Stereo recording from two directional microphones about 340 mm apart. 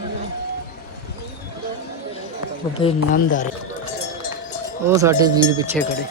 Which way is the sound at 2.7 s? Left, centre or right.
Centre.